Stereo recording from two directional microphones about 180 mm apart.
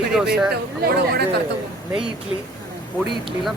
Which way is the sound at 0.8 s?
60° right (ahead or behind).